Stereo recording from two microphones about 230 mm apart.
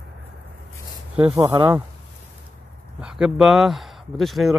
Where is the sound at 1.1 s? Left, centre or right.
Centre.